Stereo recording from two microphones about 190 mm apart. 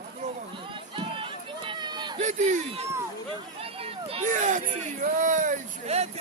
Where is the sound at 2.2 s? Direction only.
35° right (ahead or behind).